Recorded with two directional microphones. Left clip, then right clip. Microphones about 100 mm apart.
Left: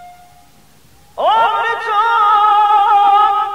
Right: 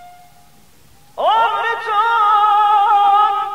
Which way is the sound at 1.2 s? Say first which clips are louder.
Left 2 dB; 25° right (ahead or behind).